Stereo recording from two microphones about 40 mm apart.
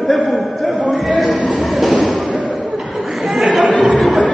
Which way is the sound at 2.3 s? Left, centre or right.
Right.